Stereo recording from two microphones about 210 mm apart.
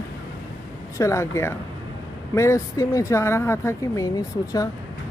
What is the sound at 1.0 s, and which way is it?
Speech, 15° left (ahead or behind).